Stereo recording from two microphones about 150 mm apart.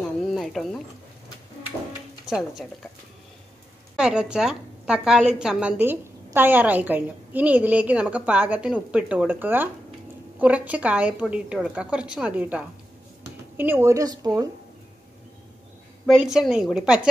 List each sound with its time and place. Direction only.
0.2 s a sound: centre (ahead or behind)
2.2 s speech: 5° right (ahead or behind)
3.9 s a woman's voice: 5° right (ahead or behind); by 14.5 s 25° right (ahead or behind)
16.1 s a woman's voice: 5° right (ahead or behind)